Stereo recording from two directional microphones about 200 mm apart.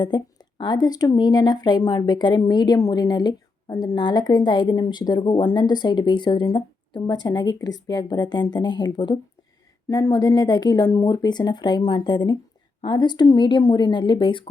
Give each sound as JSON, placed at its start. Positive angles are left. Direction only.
{"t": 0.0, "sound": "speech", "side_deg": 20}